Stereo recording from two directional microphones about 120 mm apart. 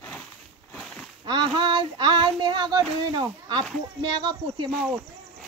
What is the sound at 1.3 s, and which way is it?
Child singing, 40° right (ahead or behind).